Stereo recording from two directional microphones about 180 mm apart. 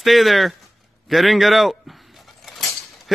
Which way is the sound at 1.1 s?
Centre (ahead or behind).